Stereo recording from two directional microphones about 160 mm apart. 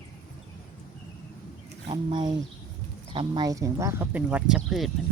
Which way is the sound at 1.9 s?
30° right (ahead or behind).